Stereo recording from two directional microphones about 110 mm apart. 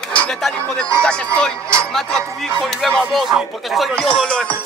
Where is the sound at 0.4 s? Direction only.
Centre (ahead or behind).